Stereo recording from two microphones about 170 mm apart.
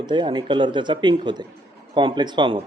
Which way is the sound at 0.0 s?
25° right (ahead or behind).